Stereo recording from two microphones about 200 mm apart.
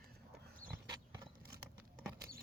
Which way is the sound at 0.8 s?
15° right (ahead or behind).